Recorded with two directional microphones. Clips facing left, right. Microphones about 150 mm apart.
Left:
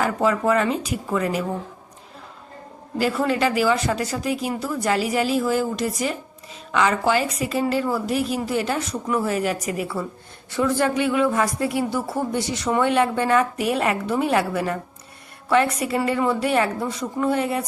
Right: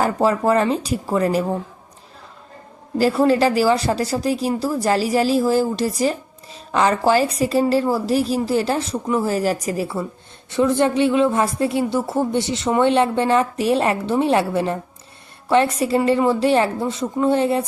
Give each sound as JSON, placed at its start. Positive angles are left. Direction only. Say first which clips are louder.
{"t": 0.0, "sound": "a woman's voice", "louder": "right 3 dB", "side_deg": -35}
{"t": 3.0, "sound": "a woman's voice", "louder": "right 5 dB", "side_deg": -30}